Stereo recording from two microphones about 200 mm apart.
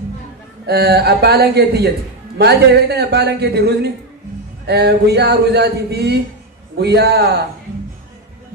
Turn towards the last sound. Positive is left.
turn(degrees=-55)  # may be behind; listen again after turning